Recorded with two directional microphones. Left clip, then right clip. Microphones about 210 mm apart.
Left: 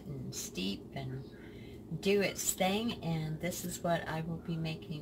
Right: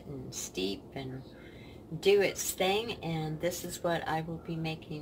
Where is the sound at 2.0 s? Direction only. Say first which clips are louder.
Right 5 dB; 35° right (ahead or behind).